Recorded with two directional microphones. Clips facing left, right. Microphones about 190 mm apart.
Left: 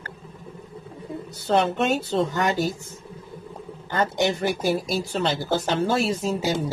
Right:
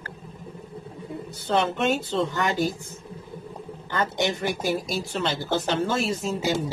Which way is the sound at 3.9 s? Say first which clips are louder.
Left 3 dB; 40° left (ahead or behind).